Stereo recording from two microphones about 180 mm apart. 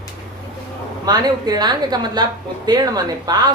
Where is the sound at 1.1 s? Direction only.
25° right (ahead or behind).